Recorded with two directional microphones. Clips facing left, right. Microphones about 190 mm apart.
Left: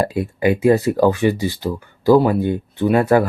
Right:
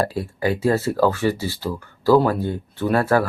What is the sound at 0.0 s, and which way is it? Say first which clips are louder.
Speech: left 4 dB; 20° left (ahead or behind).